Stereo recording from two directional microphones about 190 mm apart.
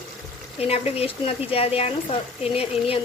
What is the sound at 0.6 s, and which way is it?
Speech, 35° left (ahead or behind).